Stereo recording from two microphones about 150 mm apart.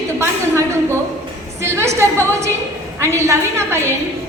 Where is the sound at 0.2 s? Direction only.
20° right (ahead or behind).